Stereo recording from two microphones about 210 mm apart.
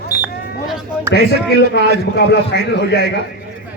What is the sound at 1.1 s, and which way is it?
A man's voice, 50° left (ahead or behind).